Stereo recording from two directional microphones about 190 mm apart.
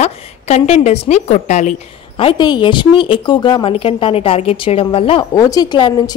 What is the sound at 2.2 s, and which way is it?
A woman's voice, 25° left (ahead or behind).